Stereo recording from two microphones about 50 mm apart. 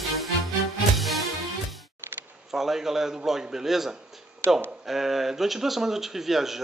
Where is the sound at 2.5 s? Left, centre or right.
Centre.